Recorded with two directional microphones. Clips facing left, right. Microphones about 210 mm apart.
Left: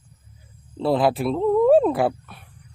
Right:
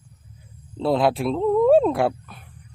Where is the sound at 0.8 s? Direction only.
Centre (ahead or behind).